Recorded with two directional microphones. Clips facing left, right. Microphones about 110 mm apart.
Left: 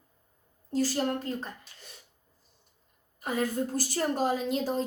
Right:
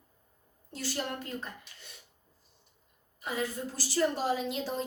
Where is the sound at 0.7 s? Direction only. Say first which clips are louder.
Left 8 dB; 40° left (ahead or behind).